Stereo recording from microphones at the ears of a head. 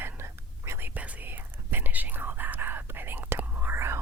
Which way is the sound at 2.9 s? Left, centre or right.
Right.